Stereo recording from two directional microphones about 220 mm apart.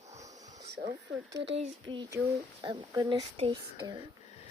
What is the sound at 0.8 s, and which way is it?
Speech, 45° right (ahead or behind).